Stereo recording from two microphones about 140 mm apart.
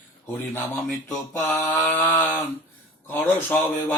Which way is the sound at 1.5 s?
10° left (ahead or behind).